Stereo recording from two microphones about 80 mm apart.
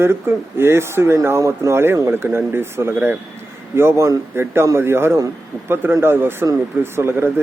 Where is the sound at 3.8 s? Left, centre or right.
Right.